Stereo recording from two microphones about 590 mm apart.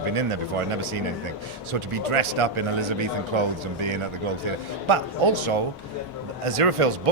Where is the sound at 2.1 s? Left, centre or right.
Right.